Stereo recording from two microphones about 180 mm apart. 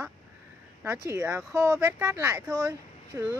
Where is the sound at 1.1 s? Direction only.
15° right (ahead or behind).